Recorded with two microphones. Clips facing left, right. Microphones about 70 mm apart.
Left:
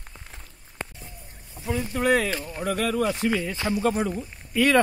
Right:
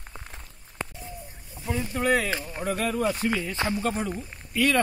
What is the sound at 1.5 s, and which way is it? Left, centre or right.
Boat, centre.